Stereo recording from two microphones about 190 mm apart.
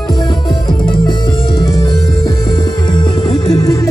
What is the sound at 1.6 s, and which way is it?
Music, 20° left (ahead or behind).